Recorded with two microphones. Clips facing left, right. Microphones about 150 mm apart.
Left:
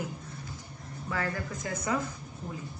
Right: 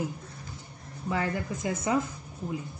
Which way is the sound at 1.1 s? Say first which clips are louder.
Right 4 dB; 20° right (ahead or behind).